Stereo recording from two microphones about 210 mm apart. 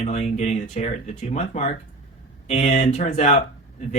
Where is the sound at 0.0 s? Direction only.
30° left (ahead or behind).